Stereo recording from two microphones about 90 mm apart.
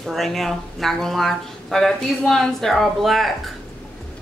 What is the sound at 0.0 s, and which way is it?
Speech, centre (ahead or behind).